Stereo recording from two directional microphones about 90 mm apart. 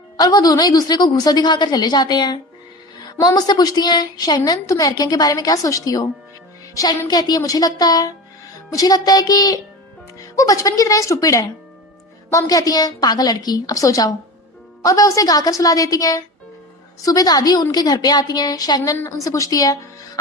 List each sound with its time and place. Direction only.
0.2 s a woman's voice: 45° left (ahead or behind)